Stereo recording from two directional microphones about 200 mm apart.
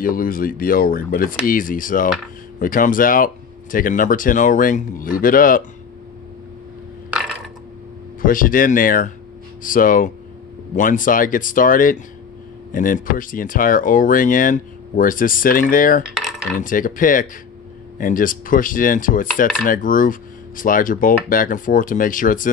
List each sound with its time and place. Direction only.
0.0 s speech: 45° left (ahead or behind)
7.1 s a sound: centre (ahead or behind)
8.2 s speech: 45° left (ahead or behind)